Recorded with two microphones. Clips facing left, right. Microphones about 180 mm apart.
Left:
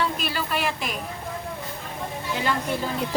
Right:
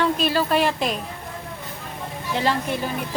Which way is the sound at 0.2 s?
35° right (ahead or behind).